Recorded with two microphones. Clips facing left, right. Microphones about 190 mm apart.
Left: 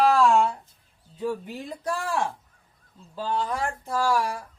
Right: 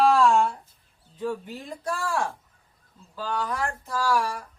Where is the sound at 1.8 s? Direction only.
20° left (ahead or behind).